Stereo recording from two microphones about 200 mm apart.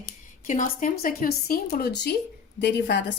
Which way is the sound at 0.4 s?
40° left (ahead or behind).